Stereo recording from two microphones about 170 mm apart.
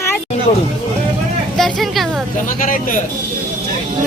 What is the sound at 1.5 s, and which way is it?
Vehicle, centre (ahead or behind).